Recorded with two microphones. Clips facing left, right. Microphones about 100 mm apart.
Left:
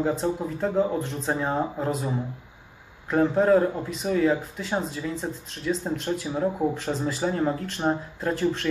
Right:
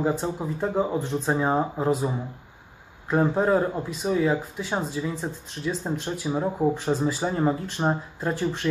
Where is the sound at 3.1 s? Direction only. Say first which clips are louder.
Left 2 dB; 15° right (ahead or behind).